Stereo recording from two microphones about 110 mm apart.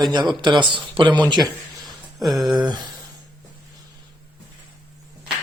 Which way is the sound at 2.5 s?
40° right (ahead or behind).